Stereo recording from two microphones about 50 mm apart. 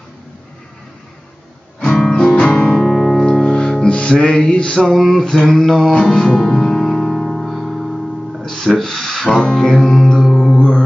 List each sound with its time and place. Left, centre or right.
1.8 s music: centre
2.1 s music: centre
4.5 s male singing: centre
4.8 s mantra: centre
5.9 s music: centre
10.2 s mantra: centre